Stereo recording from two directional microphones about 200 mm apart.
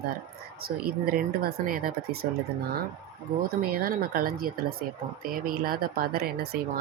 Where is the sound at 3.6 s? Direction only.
50° right (ahead or behind).